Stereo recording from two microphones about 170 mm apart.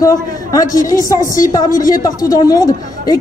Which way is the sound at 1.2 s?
50° left (ahead or behind).